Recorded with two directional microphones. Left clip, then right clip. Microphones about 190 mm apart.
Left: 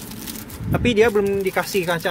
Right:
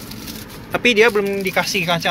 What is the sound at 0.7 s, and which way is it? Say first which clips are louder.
Speech: right 3 dB; 15° left (ahead or behind).